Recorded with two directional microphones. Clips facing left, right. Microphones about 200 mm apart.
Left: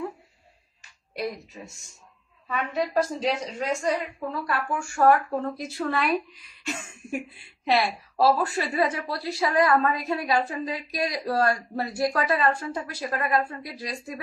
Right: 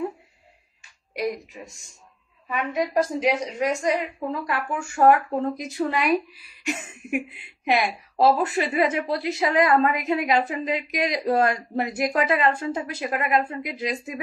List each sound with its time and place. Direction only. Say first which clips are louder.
1.1 s a woman's voice: right 4 dB; 15° right (ahead or behind)